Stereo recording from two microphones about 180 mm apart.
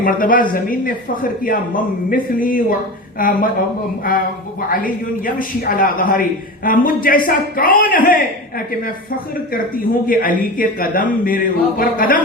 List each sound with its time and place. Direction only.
0.0 s a man's voice: 50° left (ahead or behind)
4.7 s a man's voice: 50° left (ahead or behind)
9.7 s a man's voice: 50° left (ahead or behind)